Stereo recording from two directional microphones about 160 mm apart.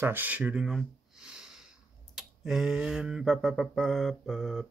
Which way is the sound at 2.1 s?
5° right (ahead or behind).